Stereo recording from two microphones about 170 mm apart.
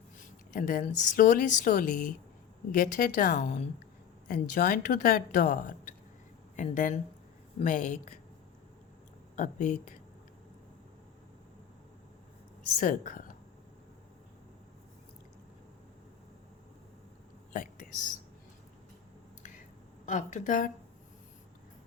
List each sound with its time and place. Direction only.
0.5 s a woman's voice: 50° left (ahead or behind)
9.3 s a woman's voice: 45° left (ahead or behind)
12.8 s a woman's voice: 50° left (ahead or behind)
17.5 s a sound: 50° left (ahead or behind)
19.4 s finger snapping: 50° left (ahead or behind)
20.1 s a woman's voice: 50° left (ahead or behind)